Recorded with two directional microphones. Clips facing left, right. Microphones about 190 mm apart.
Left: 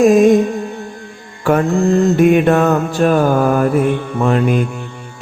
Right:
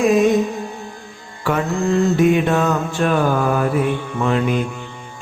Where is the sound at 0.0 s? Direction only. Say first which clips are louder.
Left 5 dB; 45° left (ahead or behind).